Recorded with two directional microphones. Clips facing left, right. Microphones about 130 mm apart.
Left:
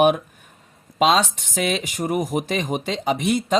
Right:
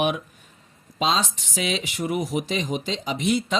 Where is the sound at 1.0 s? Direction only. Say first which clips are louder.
Left 6 dB; 70° left (ahead or behind).